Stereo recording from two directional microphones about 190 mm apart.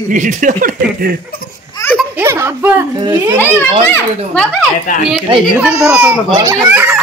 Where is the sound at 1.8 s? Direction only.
15° left (ahead or behind).